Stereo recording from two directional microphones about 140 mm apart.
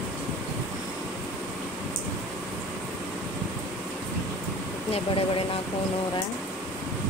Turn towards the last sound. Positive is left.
turn(degrees=45)  # may be behind; listen again after turning